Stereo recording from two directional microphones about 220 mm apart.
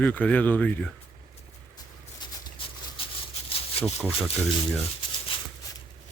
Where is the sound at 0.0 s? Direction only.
5° left (ahead or behind).